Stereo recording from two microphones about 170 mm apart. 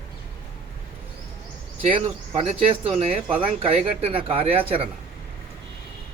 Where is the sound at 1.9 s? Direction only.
35° right (ahead or behind).